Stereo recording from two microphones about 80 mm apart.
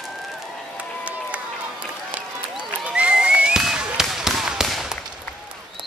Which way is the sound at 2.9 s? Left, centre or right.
Centre.